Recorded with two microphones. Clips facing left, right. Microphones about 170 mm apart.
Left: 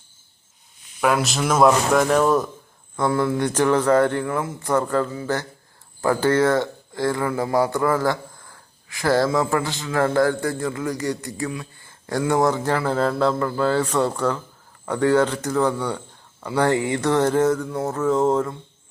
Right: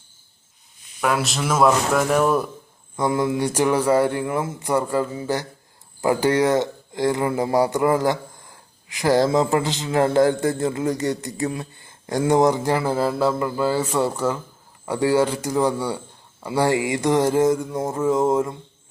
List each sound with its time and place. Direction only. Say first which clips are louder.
1.0 s a man's voice: left 2 dB; centre (ahead or behind); by 11.4 s 20° right (ahead or behind)
11.4 s speech: right 3 dB; 35° right (ahead or behind)
12.3 s a man's voice: right 2 dB; 20° right (ahead or behind)